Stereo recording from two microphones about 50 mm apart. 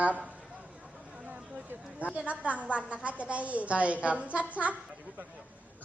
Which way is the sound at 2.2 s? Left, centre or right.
Right.